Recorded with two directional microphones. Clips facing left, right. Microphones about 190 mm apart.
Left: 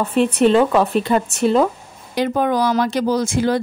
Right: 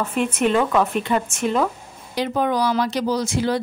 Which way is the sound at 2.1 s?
50° left (ahead or behind).